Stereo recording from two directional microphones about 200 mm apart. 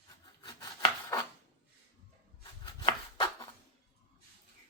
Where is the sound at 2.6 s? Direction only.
20° left (ahead or behind).